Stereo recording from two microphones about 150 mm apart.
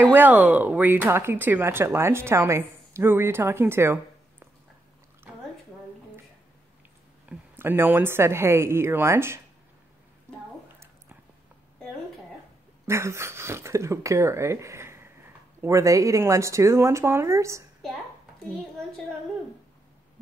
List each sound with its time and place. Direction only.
0.1 s speech: 10° right (ahead or behind)
7.2 s speech: 15° right (ahead or behind)
12.8 s speech: 15° right (ahead or behind)